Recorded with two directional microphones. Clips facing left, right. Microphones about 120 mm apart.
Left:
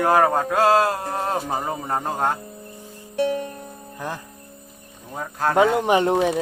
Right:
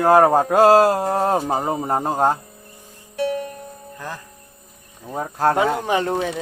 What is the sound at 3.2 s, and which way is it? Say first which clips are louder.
Music: right 1 dB; 25° left (ahead or behind).